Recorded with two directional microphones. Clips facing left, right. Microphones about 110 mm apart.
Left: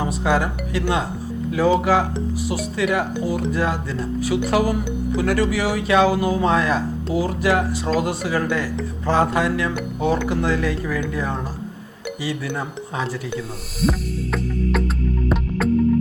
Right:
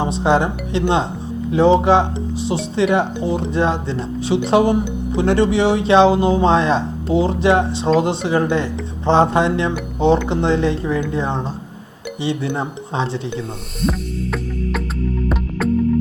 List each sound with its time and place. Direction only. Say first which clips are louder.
0.0 s speech: right 4 dB; 25° right (ahead or behind)
13.8 s music: right 1 dB; centre (ahead or behind)